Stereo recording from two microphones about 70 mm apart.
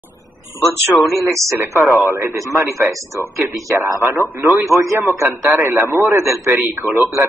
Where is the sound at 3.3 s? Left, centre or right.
Right.